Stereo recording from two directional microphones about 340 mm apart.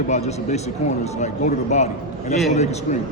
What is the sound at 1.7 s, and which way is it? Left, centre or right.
Speech, centre.